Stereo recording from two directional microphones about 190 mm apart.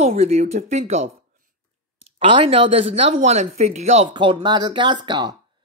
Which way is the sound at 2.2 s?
30° right (ahead or behind).